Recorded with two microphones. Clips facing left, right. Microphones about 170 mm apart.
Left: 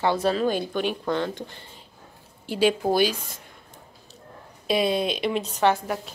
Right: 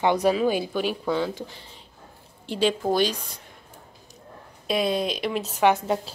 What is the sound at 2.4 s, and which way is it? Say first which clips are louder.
Speech: left 2 dB; 5° left (ahead or behind).